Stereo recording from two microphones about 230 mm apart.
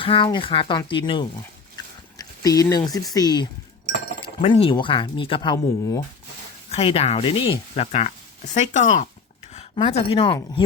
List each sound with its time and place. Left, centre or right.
0.0 s a woman's voice: left